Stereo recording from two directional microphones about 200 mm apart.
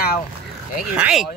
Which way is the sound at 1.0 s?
5° right (ahead or behind).